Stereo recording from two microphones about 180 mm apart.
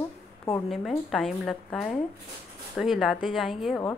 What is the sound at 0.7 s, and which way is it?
A woman's voice, centre (ahead or behind).